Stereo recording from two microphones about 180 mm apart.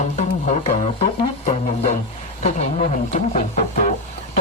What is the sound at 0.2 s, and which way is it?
Music, 40° left (ahead or behind).